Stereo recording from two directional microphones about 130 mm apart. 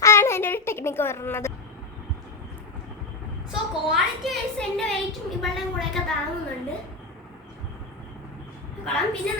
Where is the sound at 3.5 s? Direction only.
5° right (ahead or behind).